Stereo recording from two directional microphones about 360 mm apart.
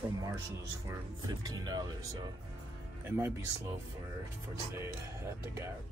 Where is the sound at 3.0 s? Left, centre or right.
Centre.